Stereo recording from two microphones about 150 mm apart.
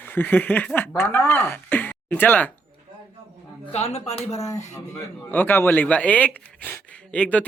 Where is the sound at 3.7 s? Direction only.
45° left (ahead or behind).